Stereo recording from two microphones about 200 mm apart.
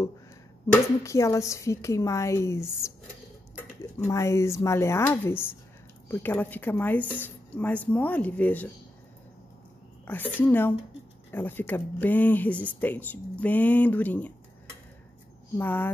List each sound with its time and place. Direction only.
1.0 s speech: 15° left (ahead or behind)
10.0 s speech: 10° left (ahead or behind)
15.5 s speech: 10° left (ahead or behind)